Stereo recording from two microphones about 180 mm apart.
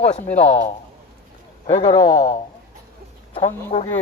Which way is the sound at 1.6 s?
25° left (ahead or behind).